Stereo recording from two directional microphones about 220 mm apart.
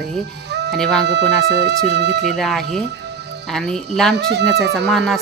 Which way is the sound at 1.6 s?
50° right (ahead or behind).